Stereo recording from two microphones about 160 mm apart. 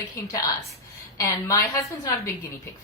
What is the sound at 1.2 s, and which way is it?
Speech, 20° left (ahead or behind).